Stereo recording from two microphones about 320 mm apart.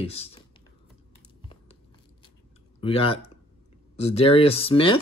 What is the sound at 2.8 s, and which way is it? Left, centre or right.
Speech, centre.